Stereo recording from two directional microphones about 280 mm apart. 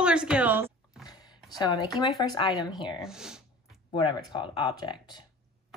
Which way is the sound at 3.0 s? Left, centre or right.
Centre.